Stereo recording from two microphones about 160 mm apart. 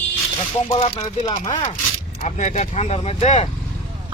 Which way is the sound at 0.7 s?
45° left (ahead or behind).